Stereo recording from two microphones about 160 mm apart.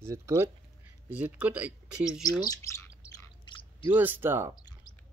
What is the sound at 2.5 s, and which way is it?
Bird, 20° left (ahead or behind).